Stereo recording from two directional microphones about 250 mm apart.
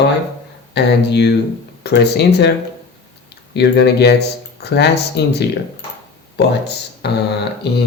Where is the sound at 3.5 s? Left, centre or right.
Left.